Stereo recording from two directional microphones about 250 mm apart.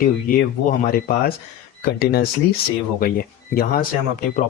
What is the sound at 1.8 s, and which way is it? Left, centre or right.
Speech, left.